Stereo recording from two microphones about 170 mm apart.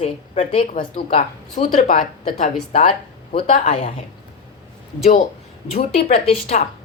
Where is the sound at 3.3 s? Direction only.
35° left (ahead or behind).